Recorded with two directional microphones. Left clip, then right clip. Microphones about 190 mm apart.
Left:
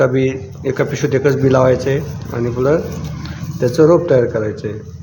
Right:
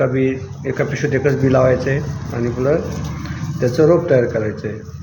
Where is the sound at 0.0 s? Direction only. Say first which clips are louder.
Left 3 dB; 30° left (ahead or behind).